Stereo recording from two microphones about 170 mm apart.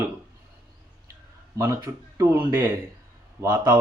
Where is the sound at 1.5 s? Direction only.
20° right (ahead or behind).